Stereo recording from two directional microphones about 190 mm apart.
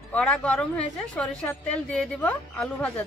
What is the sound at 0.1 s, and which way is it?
Speech, 5° left (ahead or behind).